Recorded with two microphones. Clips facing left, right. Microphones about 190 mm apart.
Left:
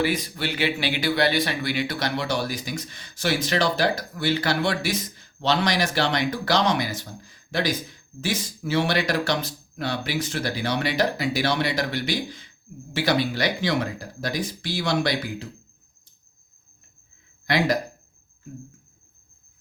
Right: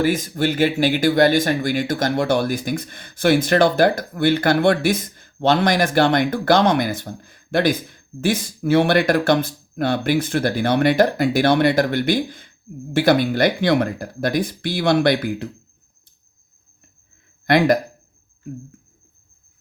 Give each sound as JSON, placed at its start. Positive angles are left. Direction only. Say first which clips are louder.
{"t": 0.0, "sound": "speech", "louder": "right 6 dB", "side_deg": -45}
{"t": 17.4, "sound": "speech", "louder": "right 7 dB", "side_deg": -55}